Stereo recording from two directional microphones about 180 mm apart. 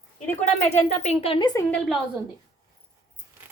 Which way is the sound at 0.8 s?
40° left (ahead or behind).